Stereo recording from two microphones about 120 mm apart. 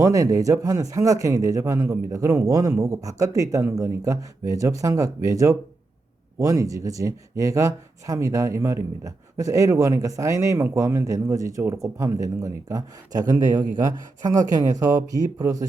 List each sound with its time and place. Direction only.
0.0 s speech: 30° right (ahead or behind)